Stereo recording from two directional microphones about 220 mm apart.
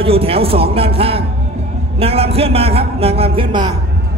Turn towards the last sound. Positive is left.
turn(degrees=-20)  # may be behind; listen again after turning